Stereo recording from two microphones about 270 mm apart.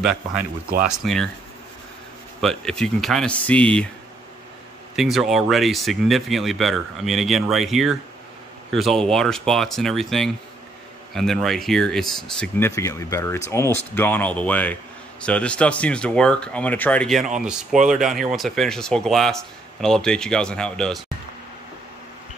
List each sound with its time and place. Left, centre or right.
0.0 s speech: centre
0.4 s speech: right
0.9 s speech: centre
2.4 s speech: centre
4.9 s speech: centre